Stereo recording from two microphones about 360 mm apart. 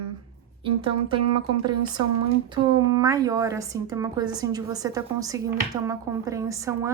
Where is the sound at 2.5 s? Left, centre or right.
Centre.